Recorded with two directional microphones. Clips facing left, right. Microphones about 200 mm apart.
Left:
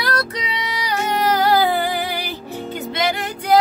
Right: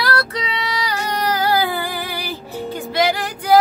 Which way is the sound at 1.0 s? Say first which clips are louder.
Left 4 dB; 20° left (ahead or behind).